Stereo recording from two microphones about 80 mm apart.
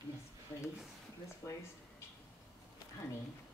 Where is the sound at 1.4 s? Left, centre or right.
Left.